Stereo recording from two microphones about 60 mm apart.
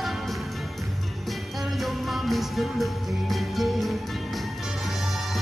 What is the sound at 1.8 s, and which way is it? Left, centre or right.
Music, centre.